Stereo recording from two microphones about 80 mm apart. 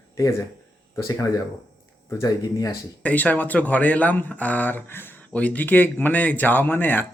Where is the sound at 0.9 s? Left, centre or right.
Left.